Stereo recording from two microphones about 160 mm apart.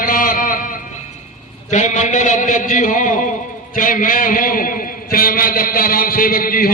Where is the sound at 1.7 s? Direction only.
50° left (ahead or behind).